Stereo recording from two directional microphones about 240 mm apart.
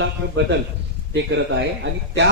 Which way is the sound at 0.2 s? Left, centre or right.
Right.